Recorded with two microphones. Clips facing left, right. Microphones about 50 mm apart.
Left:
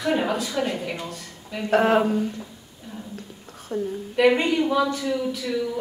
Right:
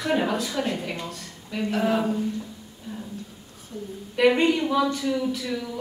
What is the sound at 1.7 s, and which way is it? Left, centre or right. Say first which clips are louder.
Speech: left 6 dB; left.